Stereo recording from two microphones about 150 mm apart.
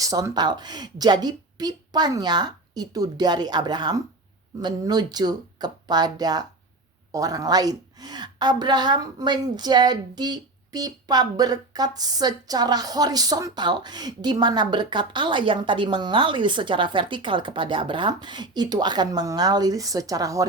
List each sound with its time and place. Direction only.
0.0 s a woman's voice: 25° right (ahead or behind)